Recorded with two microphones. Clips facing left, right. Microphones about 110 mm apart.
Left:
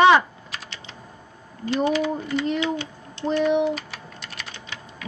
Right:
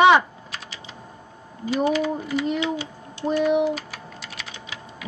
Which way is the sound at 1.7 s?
5° right (ahead or behind).